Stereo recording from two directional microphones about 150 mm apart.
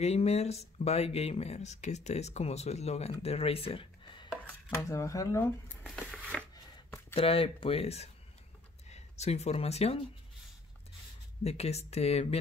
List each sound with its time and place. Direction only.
0.0 s speech: 45° left (ahead or behind)
4.8 s speech: 20° left (ahead or behind)
5.9 s a sound: 5° left (ahead or behind)
6.5 s chopping: 20° left (ahead or behind)
7.2 s speech: 40° left (ahead or behind)
11.4 s speech: 45° left (ahead or behind)